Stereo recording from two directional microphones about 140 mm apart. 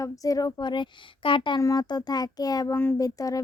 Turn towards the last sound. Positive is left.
turn(degrees=25)  # may be behind; listen again after turning